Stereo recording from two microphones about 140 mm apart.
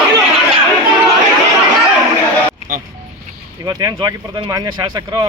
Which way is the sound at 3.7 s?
25° right (ahead or behind).